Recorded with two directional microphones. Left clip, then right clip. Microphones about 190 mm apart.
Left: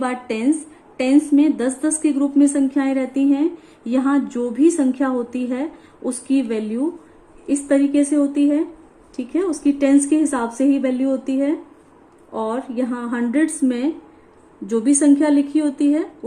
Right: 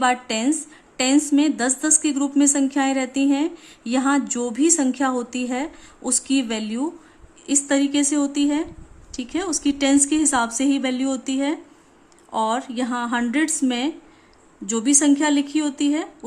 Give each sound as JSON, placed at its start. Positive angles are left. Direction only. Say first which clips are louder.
{"t": 0.0, "sound": "a woman's voice", "louder": "right 2 dB", "side_deg": -40}